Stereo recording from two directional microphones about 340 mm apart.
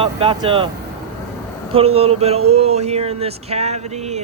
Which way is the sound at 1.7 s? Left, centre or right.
Centre.